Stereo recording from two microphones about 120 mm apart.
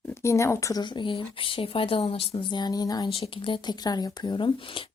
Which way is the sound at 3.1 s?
50° left (ahead or behind).